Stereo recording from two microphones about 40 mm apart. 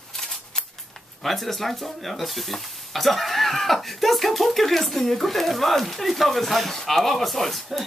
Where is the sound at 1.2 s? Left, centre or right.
Centre.